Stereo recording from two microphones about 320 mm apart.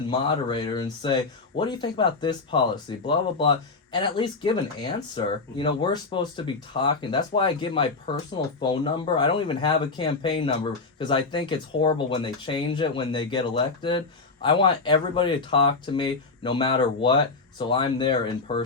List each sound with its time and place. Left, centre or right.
0.1 s speech: centre